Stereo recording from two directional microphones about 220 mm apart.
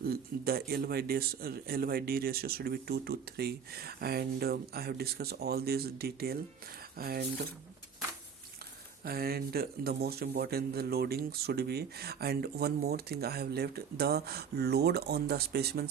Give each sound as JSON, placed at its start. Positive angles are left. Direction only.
{"t": 0.0, "sound": "speech", "side_deg": -45}
{"t": 9.0, "sound": "speech", "side_deg": -45}